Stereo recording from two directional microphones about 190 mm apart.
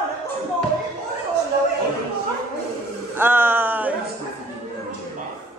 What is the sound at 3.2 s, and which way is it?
Speech, 10° right (ahead or behind).